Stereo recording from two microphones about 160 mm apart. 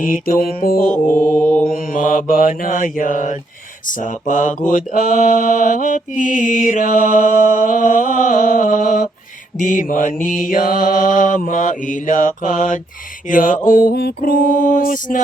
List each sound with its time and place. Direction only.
0.0 s mantra: 60° left (ahead or behind)
0.9 s mantra: 10° left (ahead or behind)
1.7 s mantra: 55° left (ahead or behind)